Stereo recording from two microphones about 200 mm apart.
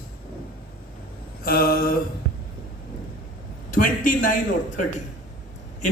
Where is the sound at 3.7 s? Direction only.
40° left (ahead or behind).